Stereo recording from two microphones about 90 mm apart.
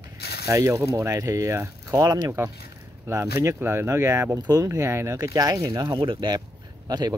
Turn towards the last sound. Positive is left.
turn(degrees=-50)  # may be behind; listen again after turning